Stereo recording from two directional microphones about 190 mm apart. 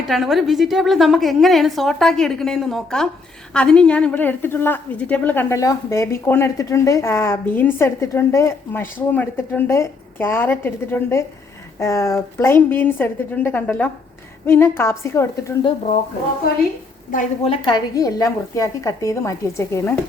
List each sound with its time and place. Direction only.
0.1 s a woman's voice: centre (ahead or behind)
17.4 s a woman's voice: 30° left (ahead or behind)